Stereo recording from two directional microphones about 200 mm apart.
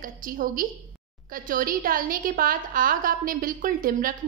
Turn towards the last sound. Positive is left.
turn(degrees=-45)  # may be behind; listen again after turning